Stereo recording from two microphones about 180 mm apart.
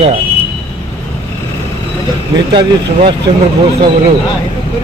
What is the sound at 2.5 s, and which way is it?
Speech, 25° right (ahead or behind).